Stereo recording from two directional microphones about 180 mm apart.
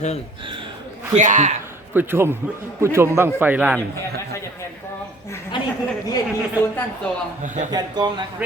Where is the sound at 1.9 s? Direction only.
10° right (ahead or behind).